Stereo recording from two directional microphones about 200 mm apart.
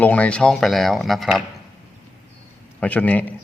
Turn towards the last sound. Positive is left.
turn(degrees=5)  # may be behind; listen again after turning